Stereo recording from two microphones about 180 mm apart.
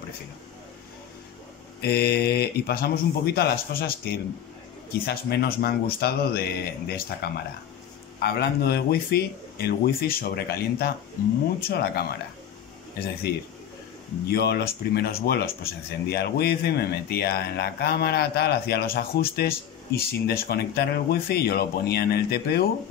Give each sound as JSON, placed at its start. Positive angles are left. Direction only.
{"t": 1.8, "sound": "speech", "side_deg": 65}
{"t": 13.3, "sound": "speech", "side_deg": 60}